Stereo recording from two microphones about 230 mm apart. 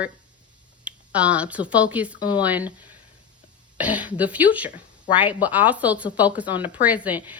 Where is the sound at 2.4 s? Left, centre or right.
Centre.